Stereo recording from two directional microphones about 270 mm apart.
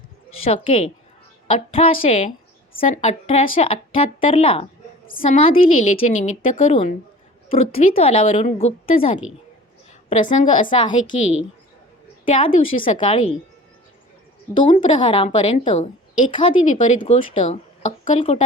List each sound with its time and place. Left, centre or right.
0.4 s speech: left
12.2 s a woman's voice: left
14.7 s speech: left